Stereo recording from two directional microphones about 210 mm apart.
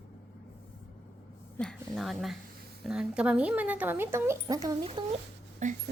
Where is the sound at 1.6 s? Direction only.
5° left (ahead or behind).